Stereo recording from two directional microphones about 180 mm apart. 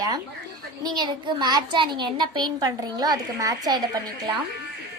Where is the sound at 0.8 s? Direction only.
25° right (ahead or behind).